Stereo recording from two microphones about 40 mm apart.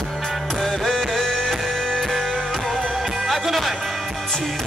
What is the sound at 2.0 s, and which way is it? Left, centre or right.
Music, centre.